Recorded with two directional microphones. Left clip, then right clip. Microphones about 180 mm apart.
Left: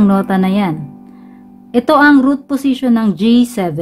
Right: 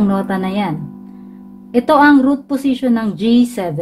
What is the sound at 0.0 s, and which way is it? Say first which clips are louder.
A woman's voice: left 4 dB; 40° left (ahead or behind).